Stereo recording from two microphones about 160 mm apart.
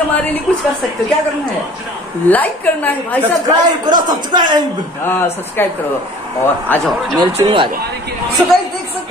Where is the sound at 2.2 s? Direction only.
10° left (ahead or behind).